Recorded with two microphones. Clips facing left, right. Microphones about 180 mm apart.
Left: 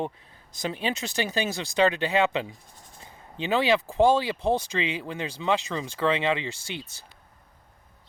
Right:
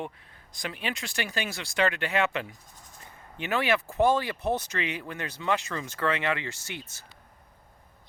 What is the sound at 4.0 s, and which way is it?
Speech, 30° left (ahead or behind).